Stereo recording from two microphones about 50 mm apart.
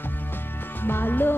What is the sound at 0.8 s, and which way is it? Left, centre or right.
Music, left.